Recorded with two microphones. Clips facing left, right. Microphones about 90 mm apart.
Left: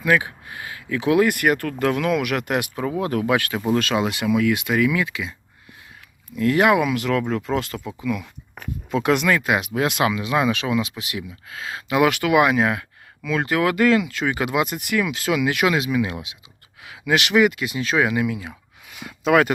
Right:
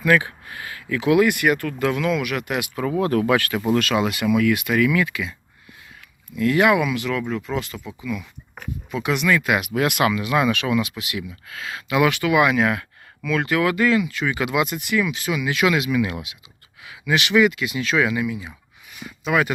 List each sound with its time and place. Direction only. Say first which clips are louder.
0.0 s speech: right 1 dB; 20° left (ahead or behind); by 2.6 s 50° left (ahead or behind)
2.7 s speech: right 2 dB; 20° left (ahead or behind)
6.3 s speech: even; 35° left (ahead or behind); by 9.4 s 50° left (ahead or behind)
9.4 s speech: even; 30° left (ahead or behind); by 12.5 s 50° left (ahead or behind)
12.5 s speech: even; 30° left (ahead or behind)
13.5 s speech: left 2 dB; 45° left (ahead or behind); by 14.3 s 60° left (ahead or behind)
14.3 s speech: right 1 dB; 40° left (ahead or behind); by 15.6 s 60° left (ahead or behind)
15.6 s speech: right 1 dB; 35° left (ahead or behind)
16.8 s speech: left 1 dB; 55° left (ahead or behind)
18.3 s speech: left 1 dB; 65° left (ahead or behind)
18.9 s speech: left 4 dB; 85° left; by 19.5 s 60° left (ahead or behind)